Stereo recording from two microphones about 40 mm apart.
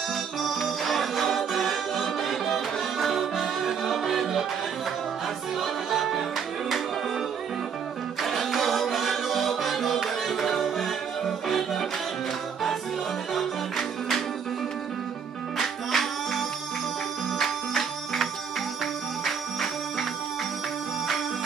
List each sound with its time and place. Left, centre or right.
0.4 s music: centre
5.6 s music: centre
8.2 s music: centre
13.3 s music: centre
15.5 s music: centre